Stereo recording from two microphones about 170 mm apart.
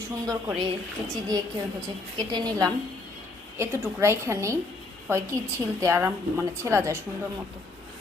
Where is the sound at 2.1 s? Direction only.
25° right (ahead or behind).